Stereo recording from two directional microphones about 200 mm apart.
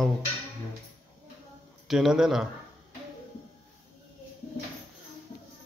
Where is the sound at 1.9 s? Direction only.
Centre (ahead or behind).